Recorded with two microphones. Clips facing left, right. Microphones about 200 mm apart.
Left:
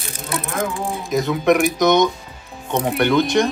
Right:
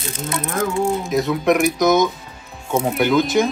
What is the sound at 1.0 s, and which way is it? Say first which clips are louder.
Speech: left 5 dB; centre (ahead or behind).